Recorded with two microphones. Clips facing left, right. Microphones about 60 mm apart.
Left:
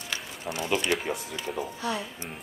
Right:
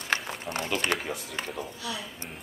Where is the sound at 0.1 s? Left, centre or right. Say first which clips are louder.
Right 5 dB; right.